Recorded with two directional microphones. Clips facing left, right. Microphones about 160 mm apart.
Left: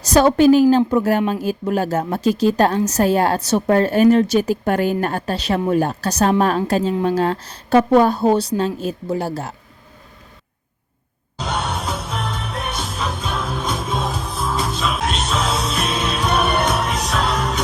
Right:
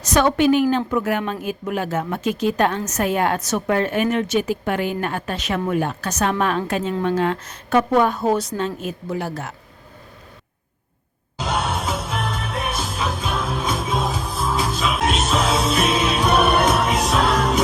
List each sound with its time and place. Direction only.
0.0 s a woman's voice: 35° left (ahead or behind)
11.3 s music: centre (ahead or behind)